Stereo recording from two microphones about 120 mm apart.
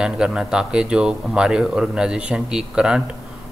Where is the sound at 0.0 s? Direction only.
5° right (ahead or behind).